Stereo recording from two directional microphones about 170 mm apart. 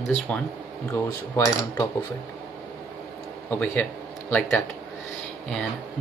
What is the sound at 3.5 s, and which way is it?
Speech, 10° left (ahead or behind).